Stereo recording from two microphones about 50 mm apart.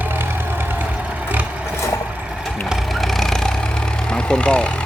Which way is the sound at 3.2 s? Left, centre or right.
Centre.